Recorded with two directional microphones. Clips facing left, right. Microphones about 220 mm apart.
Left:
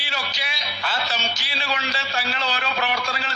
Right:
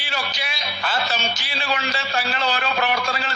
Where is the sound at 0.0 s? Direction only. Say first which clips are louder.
Right 3 dB; 50° right (ahead or behind).